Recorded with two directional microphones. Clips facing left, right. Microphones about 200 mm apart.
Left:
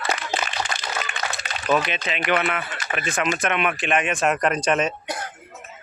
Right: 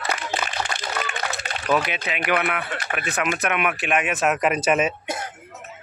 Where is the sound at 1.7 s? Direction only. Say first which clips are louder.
Even; centre (ahead or behind).